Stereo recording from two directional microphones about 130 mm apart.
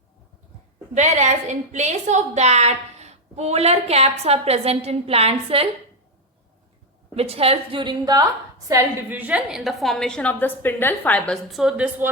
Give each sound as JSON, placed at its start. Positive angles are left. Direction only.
{"t": 0.9, "sound": "a woman's voice", "side_deg": -65}
{"t": 7.2, "sound": "a woman's voice", "side_deg": -50}
{"t": 8.6, "sound": "a woman's voice", "side_deg": -20}
{"t": 11.4, "sound": "a woman's voice", "side_deg": -5}